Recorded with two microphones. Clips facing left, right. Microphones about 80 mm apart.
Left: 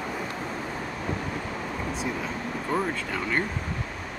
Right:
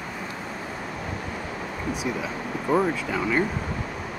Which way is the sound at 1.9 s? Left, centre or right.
Centre.